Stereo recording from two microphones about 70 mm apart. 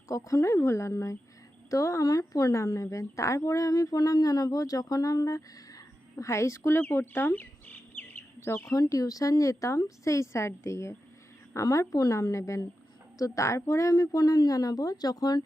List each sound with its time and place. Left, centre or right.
0.1 s speech: left
1.7 s speech: left
8.7 s speech: left